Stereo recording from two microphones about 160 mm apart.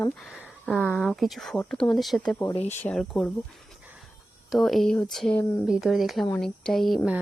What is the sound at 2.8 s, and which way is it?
Speech, 5° left (ahead or behind).